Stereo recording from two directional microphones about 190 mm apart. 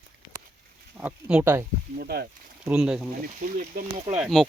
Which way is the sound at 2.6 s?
5° right (ahead or behind).